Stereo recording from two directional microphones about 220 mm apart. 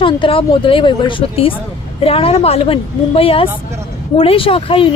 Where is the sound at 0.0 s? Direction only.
25° left (ahead or behind).